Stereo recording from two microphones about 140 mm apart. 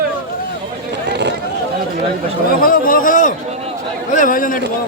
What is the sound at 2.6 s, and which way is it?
A man's voice, 90° left.